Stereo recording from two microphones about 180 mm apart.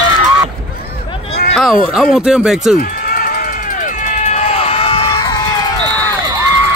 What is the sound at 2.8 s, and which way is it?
Run, 55° left (ahead or behind).